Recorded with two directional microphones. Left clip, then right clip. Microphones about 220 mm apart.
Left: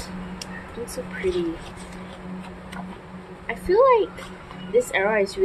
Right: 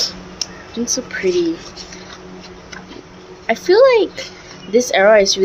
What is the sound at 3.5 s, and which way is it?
Speech, 50° right (ahead or behind).